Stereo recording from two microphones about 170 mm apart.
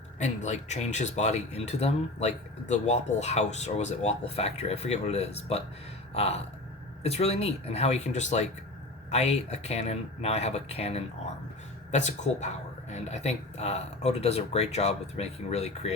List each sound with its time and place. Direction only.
0.2 s speech: 45° left (ahead or behind)